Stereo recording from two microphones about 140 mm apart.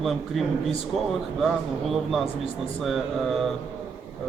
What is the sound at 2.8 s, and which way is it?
Speech, centre (ahead or behind).